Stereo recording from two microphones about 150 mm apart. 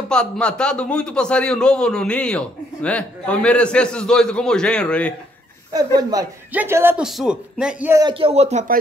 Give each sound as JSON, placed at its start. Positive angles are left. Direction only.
{"t": 0.1, "sound": "speech", "side_deg": 5}
{"t": 5.9, "sound": "a man's voice", "side_deg": -25}
{"t": 6.5, "sound": "speech", "side_deg": -15}
{"t": 7.1, "sound": "speech", "side_deg": -5}
{"t": 8.1, "sound": "speech", "side_deg": -40}